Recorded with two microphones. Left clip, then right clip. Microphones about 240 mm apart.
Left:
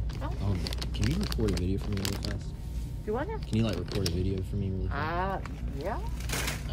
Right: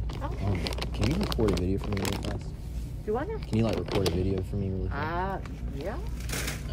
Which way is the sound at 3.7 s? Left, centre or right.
Right.